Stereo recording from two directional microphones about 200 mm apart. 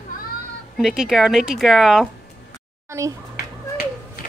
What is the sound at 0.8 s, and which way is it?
Speech, centre (ahead or behind).